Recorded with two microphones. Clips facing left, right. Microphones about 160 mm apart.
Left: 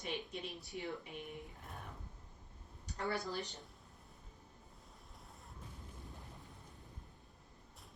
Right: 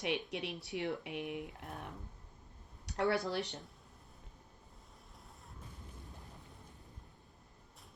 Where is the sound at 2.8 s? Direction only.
75° right (ahead or behind).